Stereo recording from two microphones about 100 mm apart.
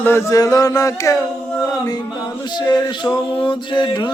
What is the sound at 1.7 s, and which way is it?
Male singing, 40° left (ahead or behind).